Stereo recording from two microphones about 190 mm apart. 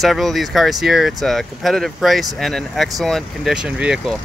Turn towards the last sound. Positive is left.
turn(degrees=-5)  # may be behind; listen again after turning